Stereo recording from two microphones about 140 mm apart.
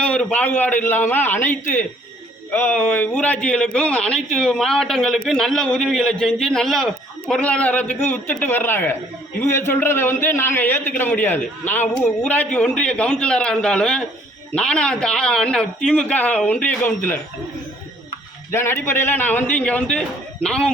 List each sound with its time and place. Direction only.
0.0 s a man's voice: 10° left (ahead or behind)
18.5 s a man's voice: 15° left (ahead or behind)